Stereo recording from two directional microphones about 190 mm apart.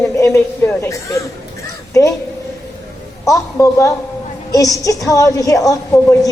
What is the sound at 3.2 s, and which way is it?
A woman's voice, 15° left (ahead or behind).